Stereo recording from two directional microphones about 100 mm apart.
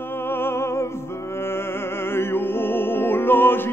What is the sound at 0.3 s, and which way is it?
Music, 25° left (ahead or behind).